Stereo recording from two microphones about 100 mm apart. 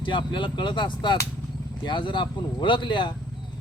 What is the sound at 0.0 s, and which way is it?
Speech, 50° left (ahead or behind).